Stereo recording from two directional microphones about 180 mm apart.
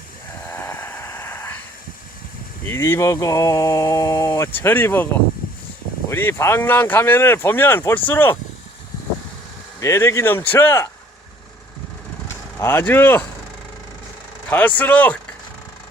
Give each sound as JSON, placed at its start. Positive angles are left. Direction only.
{"t": 0.4, "sound": "a sound", "side_deg": 10}
{"t": 2.6, "sound": "speech", "side_deg": 15}
{"t": 6.1, "sound": "speech", "side_deg": 15}
{"t": 9.8, "sound": "speech", "side_deg": 15}
{"t": 12.3, "sound": "speech", "side_deg": 15}
{"t": 14.5, "sound": "speech", "side_deg": 10}